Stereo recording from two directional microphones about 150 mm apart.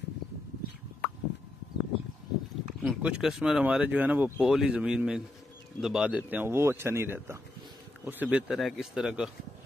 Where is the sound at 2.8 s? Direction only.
5° right (ahead or behind).